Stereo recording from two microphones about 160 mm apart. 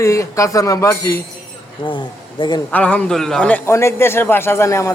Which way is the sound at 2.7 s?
10° left (ahead or behind).